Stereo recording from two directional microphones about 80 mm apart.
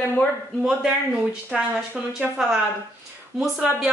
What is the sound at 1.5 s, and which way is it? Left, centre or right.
A woman's voice, centre.